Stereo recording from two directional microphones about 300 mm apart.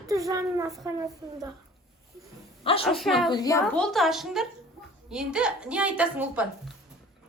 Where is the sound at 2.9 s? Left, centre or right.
Centre.